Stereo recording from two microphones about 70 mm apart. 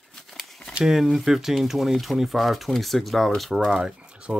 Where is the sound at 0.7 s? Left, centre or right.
Centre.